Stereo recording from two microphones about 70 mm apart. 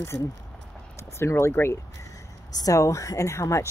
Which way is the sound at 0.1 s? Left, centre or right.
Centre.